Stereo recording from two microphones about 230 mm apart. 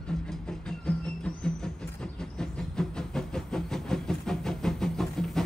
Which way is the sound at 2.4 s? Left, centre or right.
Centre.